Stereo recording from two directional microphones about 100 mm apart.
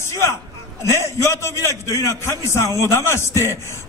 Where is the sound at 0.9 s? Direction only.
25° left (ahead or behind).